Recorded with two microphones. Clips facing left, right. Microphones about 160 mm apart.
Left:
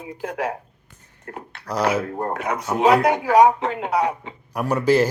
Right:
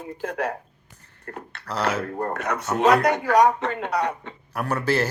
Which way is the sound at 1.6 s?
15° left (ahead or behind).